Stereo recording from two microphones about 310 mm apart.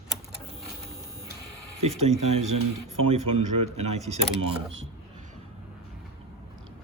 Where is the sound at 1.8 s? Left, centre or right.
Right.